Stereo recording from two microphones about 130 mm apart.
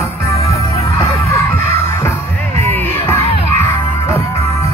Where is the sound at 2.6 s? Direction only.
15° left (ahead or behind).